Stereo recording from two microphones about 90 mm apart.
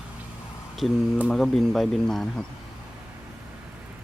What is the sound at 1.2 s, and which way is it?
Speech, 5° left (ahead or behind).